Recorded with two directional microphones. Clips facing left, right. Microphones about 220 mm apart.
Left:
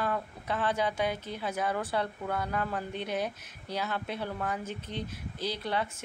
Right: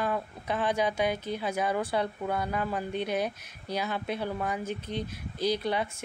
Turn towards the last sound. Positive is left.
turn(degrees=-15)  # may be behind; listen again after turning